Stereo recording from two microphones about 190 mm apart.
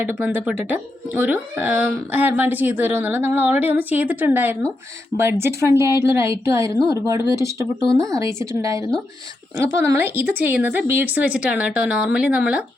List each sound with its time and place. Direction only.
0.0 s speech: 10° right (ahead or behind)
7.9 s speech: 5° left (ahead or behind)
8.1 s speech: 15° right (ahead or behind)